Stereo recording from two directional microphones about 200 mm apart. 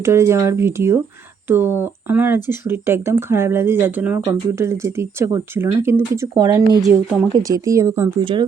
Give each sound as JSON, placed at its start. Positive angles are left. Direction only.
{"t": 0.0, "sound": "speech", "side_deg": -15}
{"t": 8.2, "sound": "speech", "side_deg": -25}